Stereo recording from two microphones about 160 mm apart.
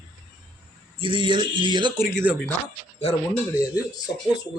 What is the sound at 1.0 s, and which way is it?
Speech, 30° right (ahead or behind).